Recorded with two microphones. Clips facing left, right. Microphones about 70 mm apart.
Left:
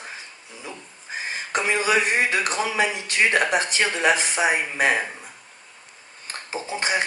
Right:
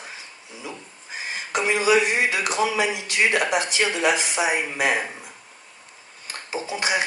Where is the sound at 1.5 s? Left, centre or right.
Left.